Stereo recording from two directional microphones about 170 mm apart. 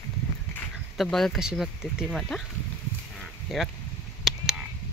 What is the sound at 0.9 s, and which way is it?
Speech, centre (ahead or behind).